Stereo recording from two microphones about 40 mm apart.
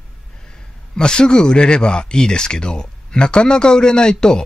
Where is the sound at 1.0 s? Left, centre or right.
Left.